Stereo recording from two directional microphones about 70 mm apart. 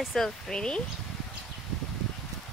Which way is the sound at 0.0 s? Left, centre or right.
Centre.